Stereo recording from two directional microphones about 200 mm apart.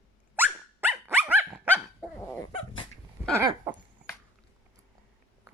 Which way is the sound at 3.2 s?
10° right (ahead or behind).